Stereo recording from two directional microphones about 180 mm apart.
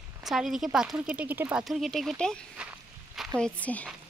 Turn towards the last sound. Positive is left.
turn(degrees=10)  # may be behind; listen again after turning